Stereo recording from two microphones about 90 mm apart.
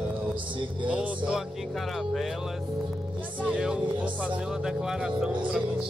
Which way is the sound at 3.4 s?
10° right (ahead or behind).